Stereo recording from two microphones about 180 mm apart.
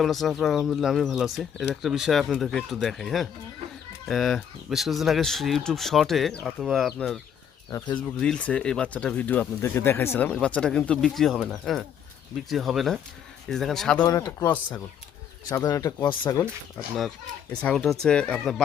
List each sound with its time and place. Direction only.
0.0 s speech: centre (ahead or behind)
7.7 s speech: 15° left (ahead or behind)
14.1 s speech: 20° left (ahead or behind)
17.5 s speech: 5° left (ahead or behind)